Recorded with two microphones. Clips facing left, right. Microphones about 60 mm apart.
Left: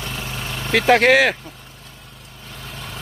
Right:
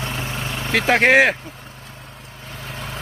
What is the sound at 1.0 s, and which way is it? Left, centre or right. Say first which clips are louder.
Speech: right 1 dB; right.